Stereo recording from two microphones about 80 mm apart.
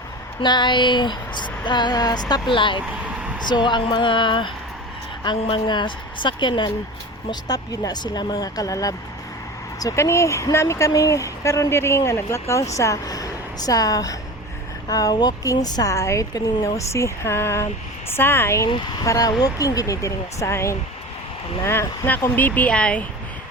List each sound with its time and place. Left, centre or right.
0.4 s a sound: left
3.5 s a woman's voice: left
5.2 s a woman's voice: left
7.3 s speech: left
19.0 s speech: left; by 23.0 s centre